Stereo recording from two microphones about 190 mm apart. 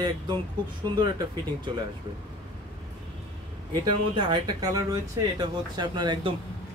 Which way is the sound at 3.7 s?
20° right (ahead or behind).